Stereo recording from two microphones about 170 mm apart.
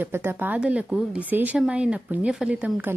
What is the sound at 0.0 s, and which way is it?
A woman's voice, 15° right (ahead or behind).